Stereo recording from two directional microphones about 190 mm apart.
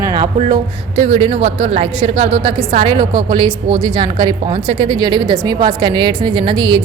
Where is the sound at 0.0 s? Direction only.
20° right (ahead or behind).